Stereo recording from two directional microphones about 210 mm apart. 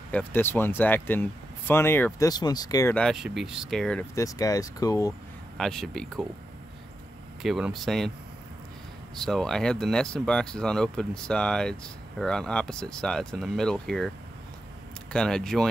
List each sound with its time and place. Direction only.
0.1 s speech: 10° left (ahead or behind)
2.9 s speech: centre (ahead or behind)
4.1 s speech: 15° left (ahead or behind)
5.6 s speech: centre (ahead or behind)
7.4 s speech: centre (ahead or behind)
9.1 s speech: centre (ahead or behind)
15.1 s speech: 5° left (ahead or behind)